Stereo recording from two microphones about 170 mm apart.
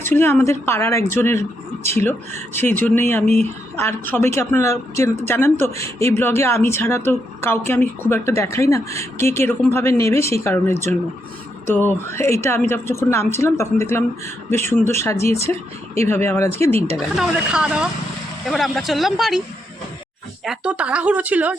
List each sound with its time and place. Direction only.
0.0 s a woman's voice: 15° left (ahead or behind)
1.8 s speech: 40° right (ahead or behind)
2.0 s a woman's voice: 10° left (ahead or behind)
17.2 s speech: 5° right (ahead or behind)
20.4 s speech: 5° right (ahead or behind)